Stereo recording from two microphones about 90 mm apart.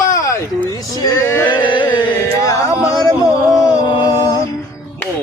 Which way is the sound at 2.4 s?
35° left (ahead or behind).